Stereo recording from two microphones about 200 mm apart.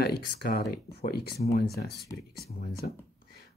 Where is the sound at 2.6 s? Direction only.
50° left (ahead or behind).